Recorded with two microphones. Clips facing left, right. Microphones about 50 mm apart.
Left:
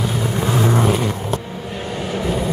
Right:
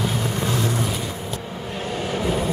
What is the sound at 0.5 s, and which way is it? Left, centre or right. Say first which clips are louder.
Vehicle: left 8 dB; left.